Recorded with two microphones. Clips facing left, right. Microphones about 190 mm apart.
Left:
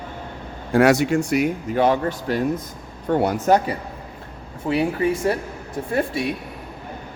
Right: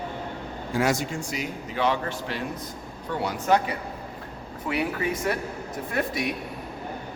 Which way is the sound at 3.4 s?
40° left (ahead or behind).